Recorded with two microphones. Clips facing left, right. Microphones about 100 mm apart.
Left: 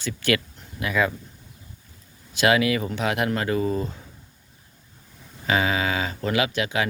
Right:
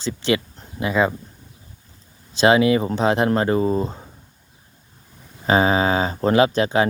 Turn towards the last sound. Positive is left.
turn(degrees=-35)  # may be behind; listen again after turning